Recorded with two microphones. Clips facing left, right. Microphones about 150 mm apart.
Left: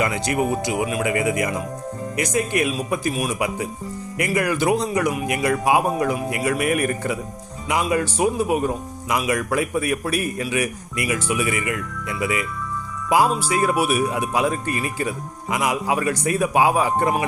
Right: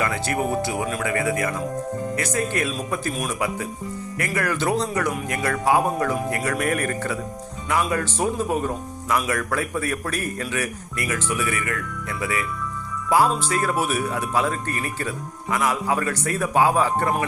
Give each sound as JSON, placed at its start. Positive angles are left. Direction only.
{"t": 0.0, "sound": "speech", "side_deg": 15}